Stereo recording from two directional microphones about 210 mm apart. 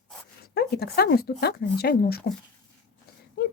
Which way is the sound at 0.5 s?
50° left (ahead or behind).